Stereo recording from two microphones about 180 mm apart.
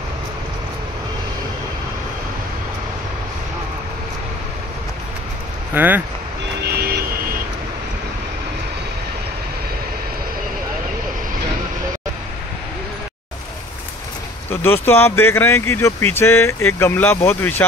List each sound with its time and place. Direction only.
5.8 s speech: 10° right (ahead or behind)
6.7 s vehicle: 60° right (ahead or behind)
14.5 s speech: 10° left (ahead or behind)